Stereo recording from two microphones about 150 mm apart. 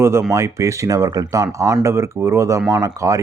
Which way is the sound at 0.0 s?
15° right (ahead or behind).